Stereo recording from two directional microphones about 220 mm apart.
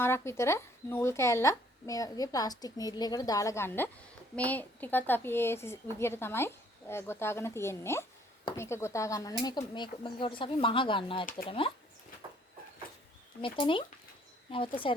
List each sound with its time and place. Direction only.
0.0 s speech: 10° left (ahead or behind)
13.4 s speech: 25° left (ahead or behind)